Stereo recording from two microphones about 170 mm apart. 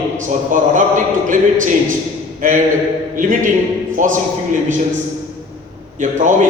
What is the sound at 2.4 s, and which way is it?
A man's voice, 50° right (ahead or behind).